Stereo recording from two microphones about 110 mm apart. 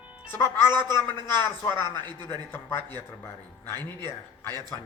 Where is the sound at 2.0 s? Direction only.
40° right (ahead or behind).